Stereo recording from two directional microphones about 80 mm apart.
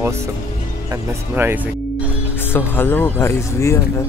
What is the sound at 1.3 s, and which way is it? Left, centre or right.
Speech, right.